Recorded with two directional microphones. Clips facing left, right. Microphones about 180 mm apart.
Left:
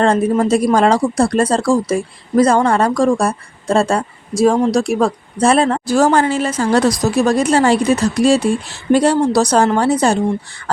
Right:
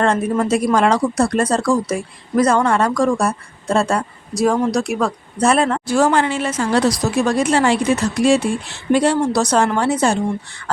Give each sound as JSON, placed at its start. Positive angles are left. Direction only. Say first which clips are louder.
{"t": 0.0, "sound": "speech", "louder": "left 4 dB", "side_deg": 35}